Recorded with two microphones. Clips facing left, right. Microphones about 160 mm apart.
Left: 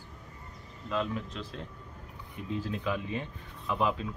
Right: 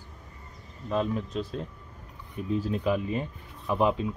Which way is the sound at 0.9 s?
35° right (ahead or behind).